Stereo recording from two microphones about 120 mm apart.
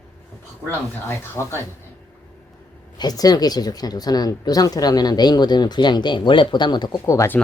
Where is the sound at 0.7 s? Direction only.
20° left (ahead or behind).